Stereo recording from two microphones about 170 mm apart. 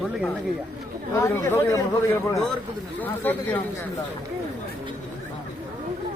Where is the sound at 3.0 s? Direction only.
10° left (ahead or behind).